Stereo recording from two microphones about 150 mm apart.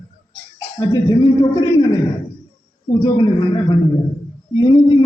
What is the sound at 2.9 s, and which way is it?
A man's voice, 25° left (ahead or behind).